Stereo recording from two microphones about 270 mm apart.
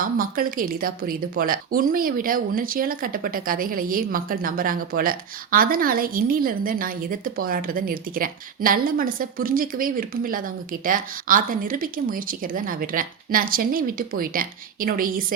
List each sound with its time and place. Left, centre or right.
0.0 s speech: right